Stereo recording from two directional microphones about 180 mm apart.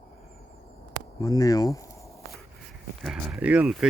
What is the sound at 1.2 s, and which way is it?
Speech, 20° left (ahead or behind).